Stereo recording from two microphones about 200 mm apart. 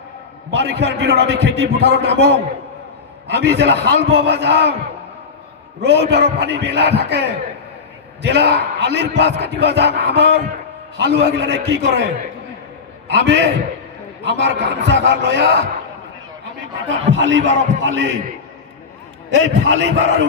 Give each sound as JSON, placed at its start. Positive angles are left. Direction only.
{"t": 0.5, "sound": "speech", "side_deg": -60}
{"t": 5.8, "sound": "speech", "side_deg": -55}
{"t": 13.1, "sound": "speech", "side_deg": -60}
{"t": 17.1, "sound": "speech", "side_deg": -70}
{"t": 19.3, "sound": "speech", "side_deg": -65}